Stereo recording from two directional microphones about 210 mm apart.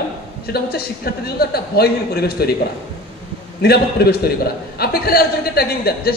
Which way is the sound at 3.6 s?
50° left (ahead or behind).